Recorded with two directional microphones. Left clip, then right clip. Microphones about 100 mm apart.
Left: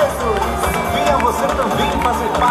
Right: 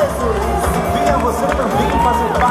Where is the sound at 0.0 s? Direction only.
15° left (ahead or behind).